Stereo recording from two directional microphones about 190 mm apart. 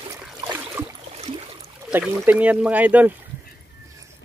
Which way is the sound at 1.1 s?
35° right (ahead or behind).